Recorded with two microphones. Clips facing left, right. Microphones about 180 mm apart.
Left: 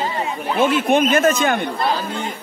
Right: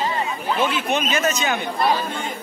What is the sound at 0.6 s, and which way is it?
A man's voice, 50° left (ahead or behind).